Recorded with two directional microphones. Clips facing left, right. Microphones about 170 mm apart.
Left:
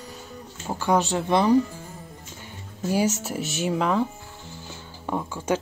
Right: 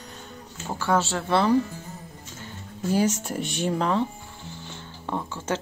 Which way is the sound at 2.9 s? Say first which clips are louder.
Even; 10° left (ahead or behind).